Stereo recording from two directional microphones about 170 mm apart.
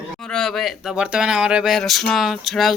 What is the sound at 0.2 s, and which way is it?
Speech, 5° left (ahead or behind).